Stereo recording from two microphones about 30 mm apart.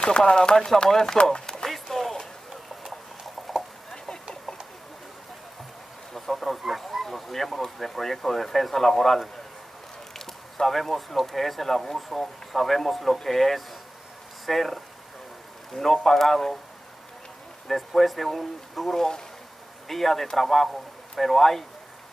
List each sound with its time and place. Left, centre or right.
0.0 s speech: left
1.4 s a sound: centre
1.7 s a sound: centre
6.1 s speech: centre
17.7 s speech: centre
18.9 s speech: left
19.9 s speech: centre